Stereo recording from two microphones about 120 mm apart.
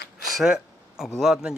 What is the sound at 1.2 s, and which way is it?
Speech, centre (ahead or behind).